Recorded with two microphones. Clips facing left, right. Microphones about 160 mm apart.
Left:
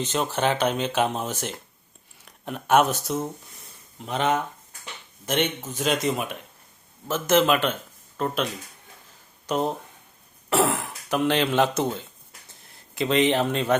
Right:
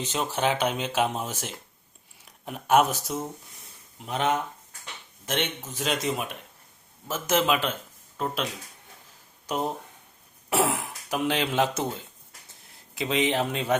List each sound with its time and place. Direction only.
0.0 s speech: 5° right (ahead or behind)
10.5 s speech: 5° right (ahead or behind)